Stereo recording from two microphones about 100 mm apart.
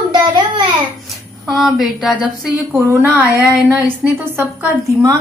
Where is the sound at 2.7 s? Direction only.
30° right (ahead or behind).